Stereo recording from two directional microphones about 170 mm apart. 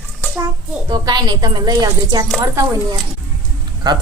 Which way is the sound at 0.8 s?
25° right (ahead or behind).